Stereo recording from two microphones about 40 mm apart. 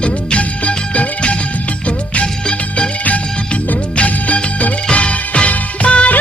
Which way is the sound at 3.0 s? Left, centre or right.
Left.